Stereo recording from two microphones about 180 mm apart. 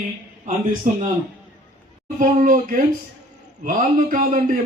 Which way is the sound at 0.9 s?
45° right (ahead or behind).